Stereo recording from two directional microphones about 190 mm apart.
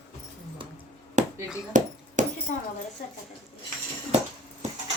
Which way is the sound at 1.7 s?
40° right (ahead or behind).